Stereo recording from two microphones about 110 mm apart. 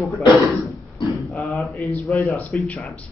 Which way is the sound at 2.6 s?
15° left (ahead or behind).